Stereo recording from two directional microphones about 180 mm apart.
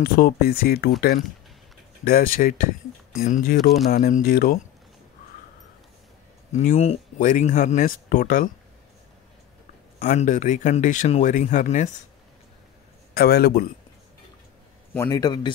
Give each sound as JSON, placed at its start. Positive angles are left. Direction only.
{"t": 0.0, "sound": "speech", "side_deg": 55}
{"t": 2.0, "sound": "speech", "side_deg": 55}
{"t": 6.5, "sound": "speech", "side_deg": 50}
{"t": 6.8, "sound": "speech", "side_deg": 35}
{"t": 7.5, "sound": "speech", "side_deg": 50}
{"t": 10.0, "sound": "speech", "side_deg": 45}
{"t": 13.1, "sound": "speech", "side_deg": 60}
{"t": 15.0, "sound": "a man's voice", "side_deg": 20}